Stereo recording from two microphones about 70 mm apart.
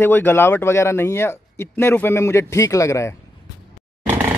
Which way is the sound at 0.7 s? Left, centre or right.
Left.